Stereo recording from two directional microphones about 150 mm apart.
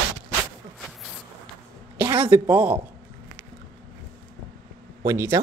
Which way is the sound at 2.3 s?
10° right (ahead or behind).